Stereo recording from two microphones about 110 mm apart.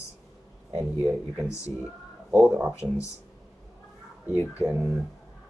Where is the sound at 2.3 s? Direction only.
15° right (ahead or behind).